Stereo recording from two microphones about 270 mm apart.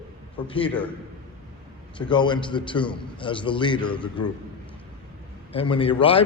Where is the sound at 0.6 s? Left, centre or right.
Centre.